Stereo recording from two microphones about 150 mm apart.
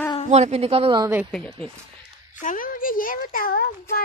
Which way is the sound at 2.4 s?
65° left (ahead or behind).